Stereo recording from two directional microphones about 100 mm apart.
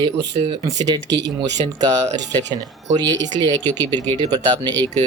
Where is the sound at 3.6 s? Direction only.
20° left (ahead or behind).